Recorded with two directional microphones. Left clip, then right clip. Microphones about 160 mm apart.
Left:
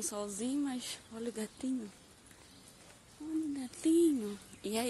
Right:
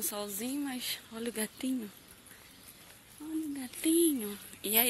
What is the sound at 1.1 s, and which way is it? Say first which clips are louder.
Speech: right 3 dB; 20° right (ahead or behind).